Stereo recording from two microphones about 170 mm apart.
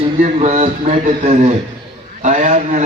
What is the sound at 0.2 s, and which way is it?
A man's voice, 45° right (ahead or behind).